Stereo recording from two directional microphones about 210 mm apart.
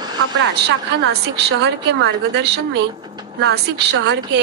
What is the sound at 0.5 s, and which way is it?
A woman's voice, 55° right (ahead or behind).